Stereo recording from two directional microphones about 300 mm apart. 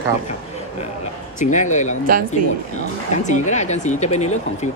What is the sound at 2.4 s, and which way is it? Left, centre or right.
Speech, right.